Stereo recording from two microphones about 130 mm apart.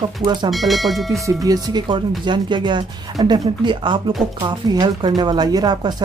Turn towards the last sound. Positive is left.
turn(degrees=-30)  # may be behind; listen again after turning